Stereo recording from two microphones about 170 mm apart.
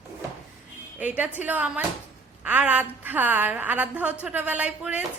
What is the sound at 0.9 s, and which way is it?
A woman's voice, 10° right (ahead or behind).